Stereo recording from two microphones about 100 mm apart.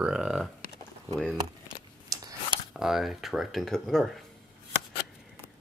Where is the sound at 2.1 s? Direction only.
40° right (ahead or behind).